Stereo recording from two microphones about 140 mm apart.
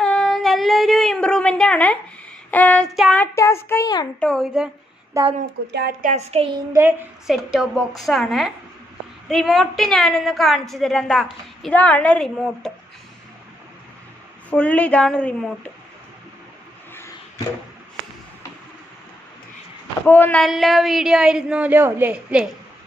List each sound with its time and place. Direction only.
0.0 s female singing: 5° left (ahead or behind)
2.5 s a woman's voice: 10° left (ahead or behind)
2.9 s a woman's voice: centre (ahead or behind)
3.2 s child singing: 20° left (ahead or behind)
4.2 s a woman's voice: centre (ahead or behind)
5.2 s speech: 25° right (ahead or behind)
6.0 s a sound: 50° right (ahead or behind)
6.7 s a woman's voice: 15° right (ahead or behind)
7.2 s a woman's voice: 5° right (ahead or behind)
14.5 s a woman's voice: 10° left (ahead or behind)
20.1 s a woman's voice: 15° left (ahead or behind)
20.4 s a woman's voice: centre (ahead or behind)